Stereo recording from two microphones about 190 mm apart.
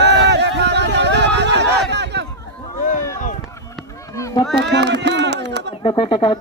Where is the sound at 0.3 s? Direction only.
65° right (ahead or behind).